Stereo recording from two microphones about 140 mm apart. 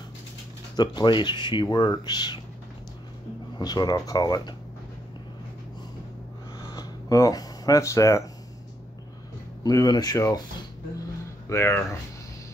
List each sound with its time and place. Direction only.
0.7 s speech: 30° left (ahead or behind)
3.5 s speech: 30° left (ahead or behind)
6.7 s speech: 20° left (ahead or behind)
9.6 s speech: 25° left (ahead or behind)
11.4 s speech: 20° left (ahead or behind)